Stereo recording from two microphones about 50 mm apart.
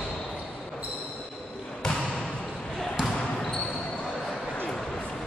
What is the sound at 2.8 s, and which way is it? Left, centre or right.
Basketball bounce, centre.